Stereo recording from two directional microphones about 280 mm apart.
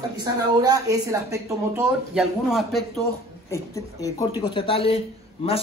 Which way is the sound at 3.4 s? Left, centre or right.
Centre.